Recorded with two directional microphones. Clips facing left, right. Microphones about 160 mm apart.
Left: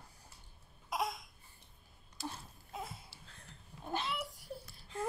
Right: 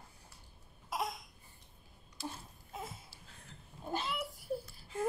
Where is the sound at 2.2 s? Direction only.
45° left (ahead or behind).